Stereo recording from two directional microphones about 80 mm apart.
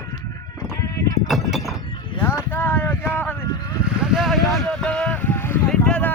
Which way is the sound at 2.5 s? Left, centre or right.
Left.